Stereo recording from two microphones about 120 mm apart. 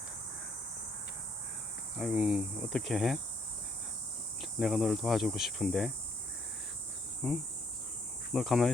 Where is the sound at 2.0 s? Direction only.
5° right (ahead or behind).